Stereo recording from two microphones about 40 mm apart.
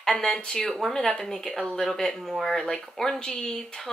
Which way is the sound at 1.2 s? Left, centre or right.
Centre.